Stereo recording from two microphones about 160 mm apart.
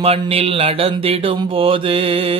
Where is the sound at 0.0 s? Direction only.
40° right (ahead or behind).